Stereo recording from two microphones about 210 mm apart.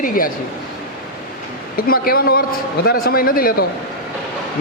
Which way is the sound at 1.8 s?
45° left (ahead or behind).